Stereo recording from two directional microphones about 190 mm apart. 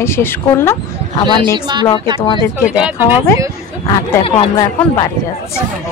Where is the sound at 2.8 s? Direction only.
10° right (ahead or behind).